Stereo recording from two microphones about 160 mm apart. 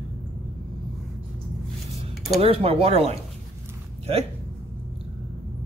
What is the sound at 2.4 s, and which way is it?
Speech, 35° right (ahead or behind).